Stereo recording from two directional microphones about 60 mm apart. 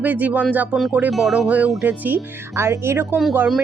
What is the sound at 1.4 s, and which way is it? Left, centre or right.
Speech, right.